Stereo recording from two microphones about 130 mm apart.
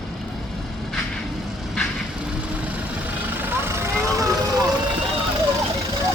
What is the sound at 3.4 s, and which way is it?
Vehicle, 20° right (ahead or behind).